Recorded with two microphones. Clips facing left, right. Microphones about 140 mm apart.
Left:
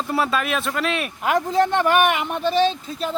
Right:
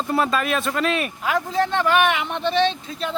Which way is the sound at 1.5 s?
15° left (ahead or behind).